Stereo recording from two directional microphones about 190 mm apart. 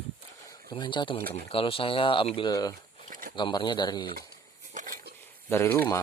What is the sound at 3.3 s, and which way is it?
Speech, 25° left (ahead or behind).